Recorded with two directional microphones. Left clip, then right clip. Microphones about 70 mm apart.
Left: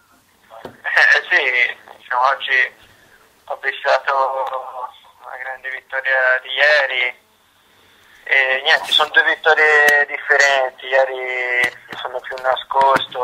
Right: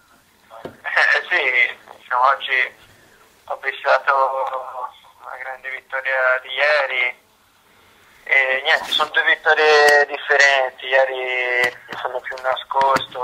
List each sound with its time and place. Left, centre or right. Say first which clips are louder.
0.5 s radio: left 3 dB; left
3.6 s speech: even; left
8.2 s speech: left 1 dB; left
9.7 s speech: right 2 dB; right
10.3 s speech: left 1 dB; centre
11.5 s speech: left 1 dB; centre
12.3 s speech: left 6 dB; left